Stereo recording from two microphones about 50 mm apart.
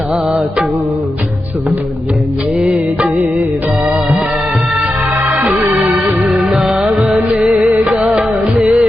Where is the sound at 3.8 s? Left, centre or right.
Centre.